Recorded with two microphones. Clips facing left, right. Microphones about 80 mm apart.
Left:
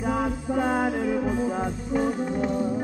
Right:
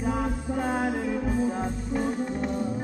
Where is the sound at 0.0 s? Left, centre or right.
Centre.